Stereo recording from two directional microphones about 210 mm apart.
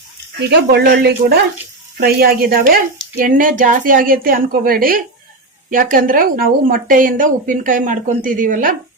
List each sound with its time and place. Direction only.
0.3 s speech: 50° right (ahead or behind)